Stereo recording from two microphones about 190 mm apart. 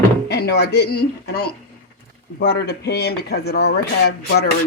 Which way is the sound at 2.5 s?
60° left (ahead or behind).